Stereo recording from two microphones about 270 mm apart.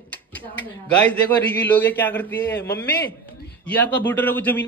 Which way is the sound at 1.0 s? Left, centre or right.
Centre.